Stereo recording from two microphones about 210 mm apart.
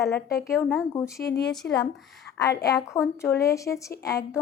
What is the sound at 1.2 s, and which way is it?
A woman's voice, 55° left (ahead or behind).